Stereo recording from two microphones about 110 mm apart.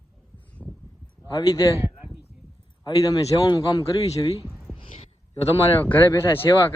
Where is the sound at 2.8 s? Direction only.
35° left (ahead or behind).